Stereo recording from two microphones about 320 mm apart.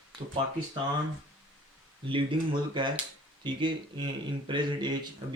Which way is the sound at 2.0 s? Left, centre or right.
Centre.